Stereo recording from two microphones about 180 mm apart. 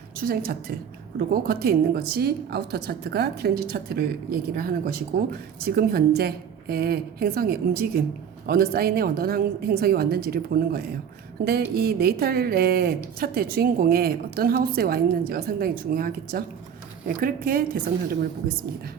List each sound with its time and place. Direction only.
0.2 s a woman's voice: 55° right (ahead or behind)